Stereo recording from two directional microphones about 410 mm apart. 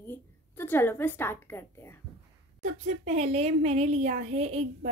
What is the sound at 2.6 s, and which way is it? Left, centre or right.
Speech, centre.